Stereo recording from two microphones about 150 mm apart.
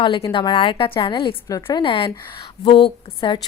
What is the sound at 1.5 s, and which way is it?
Speech, 25° left (ahead or behind).